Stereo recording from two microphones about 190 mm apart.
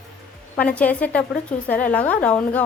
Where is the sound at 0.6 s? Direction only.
5° left (ahead or behind).